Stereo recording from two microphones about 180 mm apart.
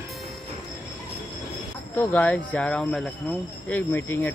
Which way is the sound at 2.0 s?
15° left (ahead or behind).